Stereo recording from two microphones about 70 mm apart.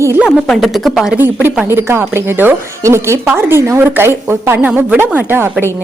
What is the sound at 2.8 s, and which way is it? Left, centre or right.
A woman's voice, right.